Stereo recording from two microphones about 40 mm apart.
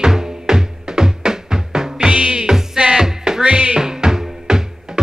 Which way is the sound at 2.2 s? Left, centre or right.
Right.